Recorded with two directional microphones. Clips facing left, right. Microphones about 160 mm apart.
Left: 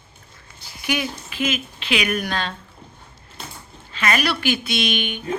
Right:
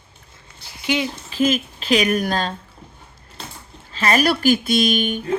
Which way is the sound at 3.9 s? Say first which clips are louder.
Right 4 dB; 35° right (ahead or behind).